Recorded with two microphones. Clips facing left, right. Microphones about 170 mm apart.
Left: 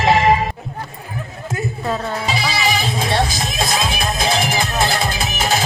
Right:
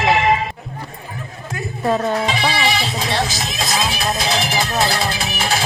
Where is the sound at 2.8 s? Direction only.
50° left (ahead or behind).